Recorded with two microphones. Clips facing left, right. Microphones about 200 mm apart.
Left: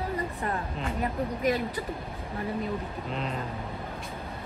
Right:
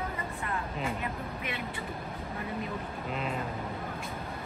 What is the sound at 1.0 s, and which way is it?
Vehicle, 40° left (ahead or behind).